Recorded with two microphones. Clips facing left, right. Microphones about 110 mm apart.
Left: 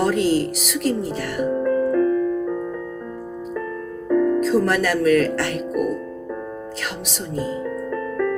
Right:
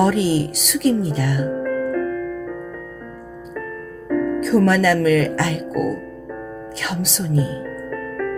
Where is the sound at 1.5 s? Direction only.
25° left (ahead or behind).